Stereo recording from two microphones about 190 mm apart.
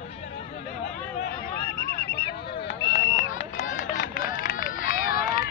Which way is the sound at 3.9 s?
45° left (ahead or behind).